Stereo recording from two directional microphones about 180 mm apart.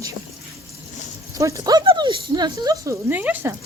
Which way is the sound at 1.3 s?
20° right (ahead or behind).